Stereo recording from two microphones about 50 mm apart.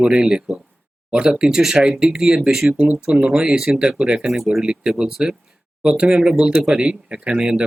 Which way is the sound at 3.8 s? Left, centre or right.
Centre.